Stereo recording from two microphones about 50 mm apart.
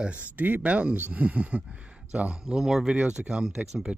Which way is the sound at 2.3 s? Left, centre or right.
Centre.